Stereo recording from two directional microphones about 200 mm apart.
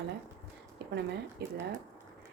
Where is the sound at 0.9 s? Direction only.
55° right (ahead or behind).